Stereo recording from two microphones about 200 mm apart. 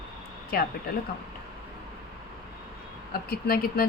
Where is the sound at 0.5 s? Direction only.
50° left (ahead or behind).